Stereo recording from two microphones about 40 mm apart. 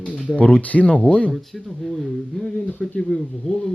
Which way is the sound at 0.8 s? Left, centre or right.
Left.